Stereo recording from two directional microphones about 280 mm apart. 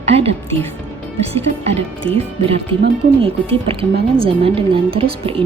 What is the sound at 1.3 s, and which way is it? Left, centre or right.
A woman's voice, right.